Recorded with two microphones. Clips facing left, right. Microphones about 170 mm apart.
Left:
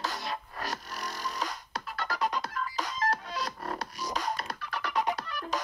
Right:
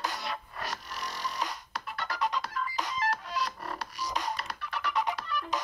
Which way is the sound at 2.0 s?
50° left (ahead or behind).